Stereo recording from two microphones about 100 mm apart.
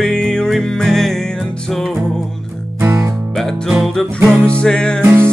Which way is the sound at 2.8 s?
30° right (ahead or behind).